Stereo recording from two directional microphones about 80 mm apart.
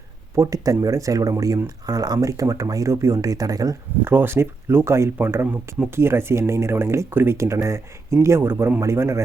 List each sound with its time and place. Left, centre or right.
0.3 s speech: right
1.9 s speech: right
4.0 s speech: right